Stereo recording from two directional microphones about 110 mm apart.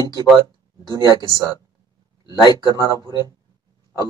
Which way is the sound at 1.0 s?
35° left (ahead or behind).